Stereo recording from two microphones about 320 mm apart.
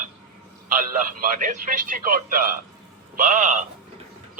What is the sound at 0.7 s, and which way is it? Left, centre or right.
A man's voice, right.